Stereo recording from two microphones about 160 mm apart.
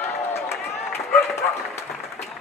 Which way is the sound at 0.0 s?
15° left (ahead or behind).